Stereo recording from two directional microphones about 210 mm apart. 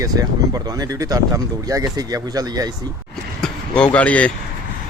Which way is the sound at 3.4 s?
5° left (ahead or behind).